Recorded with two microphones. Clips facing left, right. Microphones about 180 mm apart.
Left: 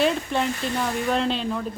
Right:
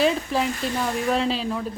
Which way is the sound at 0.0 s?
Centre (ahead or behind).